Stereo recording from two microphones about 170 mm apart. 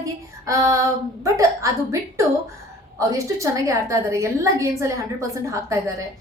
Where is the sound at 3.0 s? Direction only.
20° right (ahead or behind).